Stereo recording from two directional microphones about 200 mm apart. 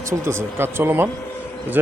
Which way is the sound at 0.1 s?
10° right (ahead or behind).